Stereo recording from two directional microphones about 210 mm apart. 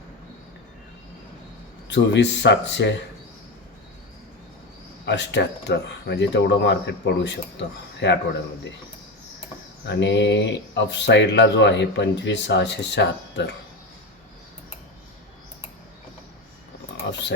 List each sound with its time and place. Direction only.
1.9 s speech: 55° left (ahead or behind)
5.0 s speech: 55° left (ahead or behind)
9.8 s speech: 55° left (ahead or behind)